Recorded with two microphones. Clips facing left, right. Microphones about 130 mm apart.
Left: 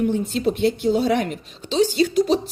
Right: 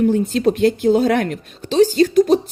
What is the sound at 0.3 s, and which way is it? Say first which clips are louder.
Speech: right 5 dB; 90° right.